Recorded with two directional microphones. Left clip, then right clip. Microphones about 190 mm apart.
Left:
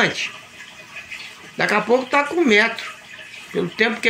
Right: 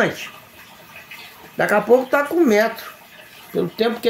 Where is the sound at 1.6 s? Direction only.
10° right (ahead or behind).